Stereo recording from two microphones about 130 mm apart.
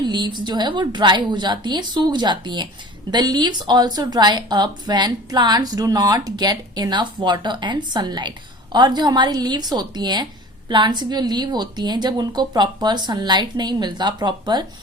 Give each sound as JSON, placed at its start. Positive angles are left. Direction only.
{"t": 0.0, "sound": "speech", "side_deg": -35}